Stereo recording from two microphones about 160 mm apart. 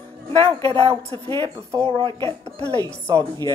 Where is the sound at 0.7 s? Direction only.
35° right (ahead or behind).